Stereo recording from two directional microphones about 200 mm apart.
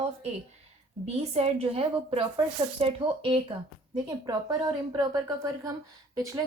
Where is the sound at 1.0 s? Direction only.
30° right (ahead or behind).